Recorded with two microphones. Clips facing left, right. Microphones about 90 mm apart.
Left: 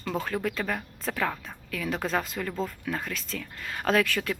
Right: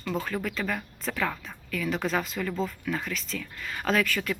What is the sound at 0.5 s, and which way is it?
Speech, 35° left (ahead or behind).